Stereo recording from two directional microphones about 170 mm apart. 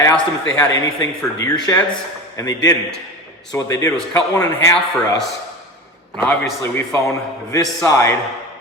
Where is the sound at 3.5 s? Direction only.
20° left (ahead or behind).